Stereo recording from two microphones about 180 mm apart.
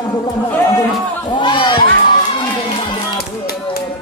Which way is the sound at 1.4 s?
25° left (ahead or behind).